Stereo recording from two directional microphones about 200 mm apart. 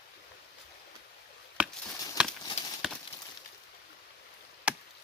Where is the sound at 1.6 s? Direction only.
5° right (ahead or behind).